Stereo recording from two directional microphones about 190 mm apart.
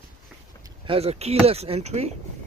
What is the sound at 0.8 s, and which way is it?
Speech, 30° right (ahead or behind).